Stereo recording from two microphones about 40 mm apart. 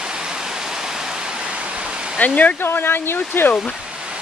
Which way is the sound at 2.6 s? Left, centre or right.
Left.